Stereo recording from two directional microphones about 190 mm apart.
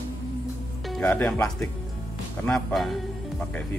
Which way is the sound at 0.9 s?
10° left (ahead or behind).